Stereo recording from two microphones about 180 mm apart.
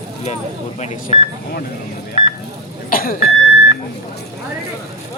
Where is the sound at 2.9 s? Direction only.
55° left (ahead or behind).